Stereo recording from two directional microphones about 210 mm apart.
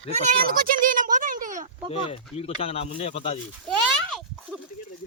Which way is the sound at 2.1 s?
30° left (ahead or behind).